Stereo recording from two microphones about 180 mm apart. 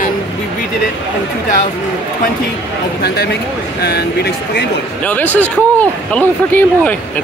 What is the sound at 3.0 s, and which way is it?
Speech, 65° left (ahead or behind).